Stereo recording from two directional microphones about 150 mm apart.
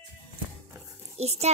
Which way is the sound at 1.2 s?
45° right (ahead or behind).